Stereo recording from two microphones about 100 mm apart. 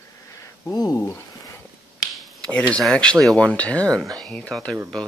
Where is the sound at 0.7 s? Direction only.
40° left (ahead or behind).